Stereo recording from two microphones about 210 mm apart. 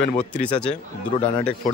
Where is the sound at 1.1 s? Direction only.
30° left (ahead or behind).